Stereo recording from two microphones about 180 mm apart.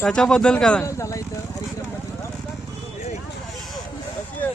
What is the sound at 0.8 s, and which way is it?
Speech, 15° left (ahead or behind).